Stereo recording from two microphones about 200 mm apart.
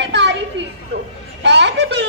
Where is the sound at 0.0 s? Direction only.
60° right (ahead or behind).